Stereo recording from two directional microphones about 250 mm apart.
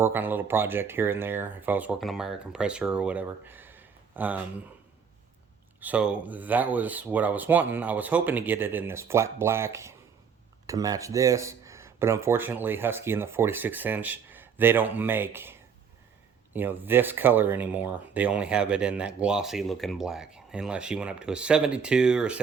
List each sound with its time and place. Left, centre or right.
0.0 s speech: centre
5.8 s speech: centre